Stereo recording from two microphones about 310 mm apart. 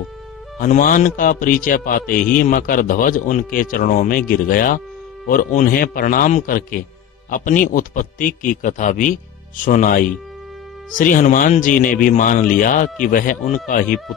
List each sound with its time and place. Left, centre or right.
0.6 s speech: left